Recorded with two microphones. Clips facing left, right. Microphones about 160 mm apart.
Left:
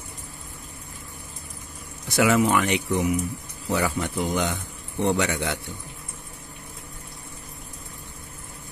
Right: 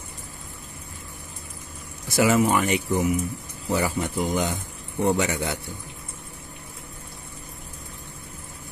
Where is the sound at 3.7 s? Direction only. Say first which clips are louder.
Even; 15° right (ahead or behind).